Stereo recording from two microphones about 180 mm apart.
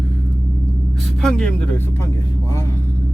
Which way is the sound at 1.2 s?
5° left (ahead or behind).